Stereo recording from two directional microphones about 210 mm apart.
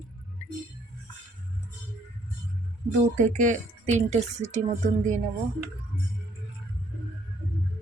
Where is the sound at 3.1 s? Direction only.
35° right (ahead or behind).